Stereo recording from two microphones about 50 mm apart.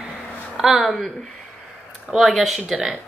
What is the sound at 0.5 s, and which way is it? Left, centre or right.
Speech, centre.